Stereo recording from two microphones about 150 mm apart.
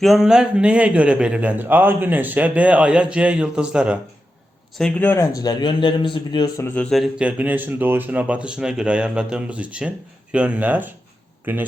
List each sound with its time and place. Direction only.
0.0 s a man's voice: centre (ahead or behind)
4.7 s speech: 5° left (ahead or behind)
5.4 s speech: 25° left (ahead or behind)
6.6 s speech: 10° left (ahead or behind)
6.9 s a man's voice: 5° right (ahead or behind)